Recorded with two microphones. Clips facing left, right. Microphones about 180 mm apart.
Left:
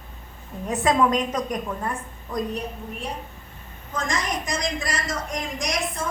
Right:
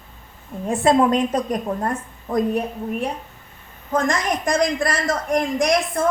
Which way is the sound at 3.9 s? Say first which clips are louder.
Right 7 dB; 55° right (ahead or behind).